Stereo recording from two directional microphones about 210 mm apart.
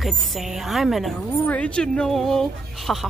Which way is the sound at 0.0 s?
Centre (ahead or behind).